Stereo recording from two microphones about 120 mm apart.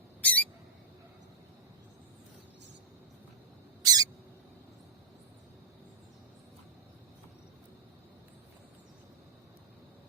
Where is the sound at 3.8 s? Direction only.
30° right (ahead or behind).